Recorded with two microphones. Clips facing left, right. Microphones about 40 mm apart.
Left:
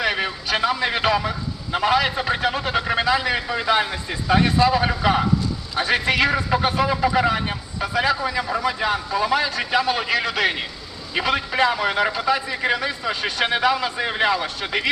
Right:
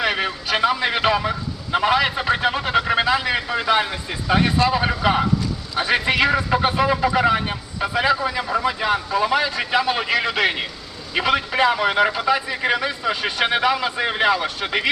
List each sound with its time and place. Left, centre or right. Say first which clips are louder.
0.0 s a sound: right 1 dB; centre
0.5 s a man's voice: right 2 dB; centre
8.2 s a man's voice: right 1 dB; centre